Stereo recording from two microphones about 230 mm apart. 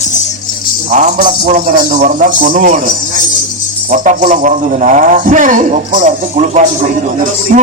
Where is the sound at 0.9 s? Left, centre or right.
Right.